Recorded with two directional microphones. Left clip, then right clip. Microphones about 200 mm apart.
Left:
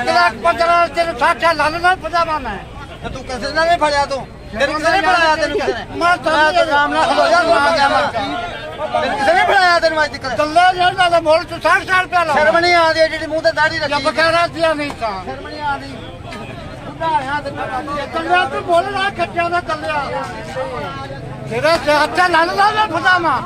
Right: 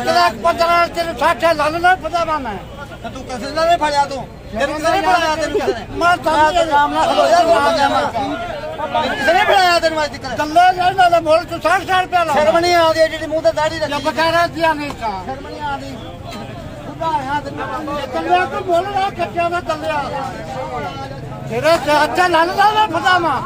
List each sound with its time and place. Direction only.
0.0 s a man's voice: 25° right (ahead or behind); by 2.5 s 5° left (ahead or behind)
3.4 s a man's voice: 10° right (ahead or behind); by 7.7 s 5° left (ahead or behind)
7.7 s a man's voice: 10° right (ahead or behind)
10.3 s speech: 15° left (ahead or behind)
12.4 s a man's voice: 15° right (ahead or behind)
13.8 s speech: 15° left (ahead or behind)
19.1 s speech: centre (ahead or behind)
21.5 s speech: 5° left (ahead or behind)